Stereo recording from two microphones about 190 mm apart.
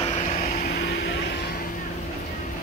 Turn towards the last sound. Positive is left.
turn(degrees=60)  # may be behind; listen again after turning